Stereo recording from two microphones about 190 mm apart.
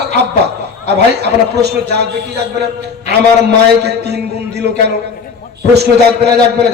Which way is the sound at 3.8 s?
60° right (ahead or behind).